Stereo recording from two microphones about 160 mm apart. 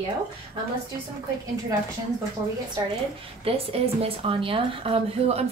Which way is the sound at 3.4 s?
35° right (ahead or behind).